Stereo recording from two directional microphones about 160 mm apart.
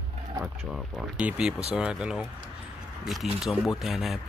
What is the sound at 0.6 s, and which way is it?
Speech, centre (ahead or behind).